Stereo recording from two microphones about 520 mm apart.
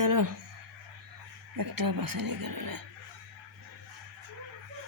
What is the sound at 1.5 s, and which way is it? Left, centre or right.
Speech, right.